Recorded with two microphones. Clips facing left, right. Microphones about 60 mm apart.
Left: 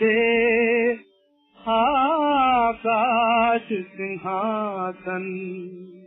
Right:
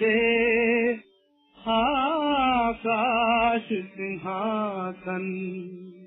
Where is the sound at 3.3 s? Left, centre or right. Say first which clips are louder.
Left 3 dB; centre.